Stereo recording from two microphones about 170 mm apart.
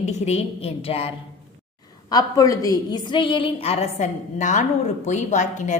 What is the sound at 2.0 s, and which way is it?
A woman's voice, 20° left (ahead or behind).